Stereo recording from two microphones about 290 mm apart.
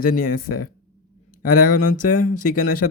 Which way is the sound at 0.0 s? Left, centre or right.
Left.